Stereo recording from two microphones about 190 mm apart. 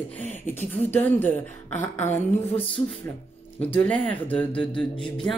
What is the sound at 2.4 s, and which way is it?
Music, 30° left (ahead or behind).